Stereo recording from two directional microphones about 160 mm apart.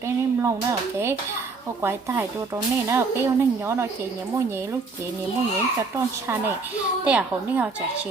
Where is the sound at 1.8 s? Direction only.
15° right (ahead or behind).